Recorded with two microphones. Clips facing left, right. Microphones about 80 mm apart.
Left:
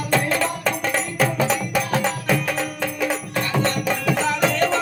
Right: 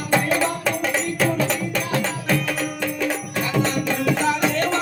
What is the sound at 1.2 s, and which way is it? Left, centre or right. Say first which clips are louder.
Music: left 1 dB; centre.